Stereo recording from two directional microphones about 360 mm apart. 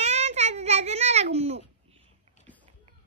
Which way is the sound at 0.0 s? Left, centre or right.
Centre.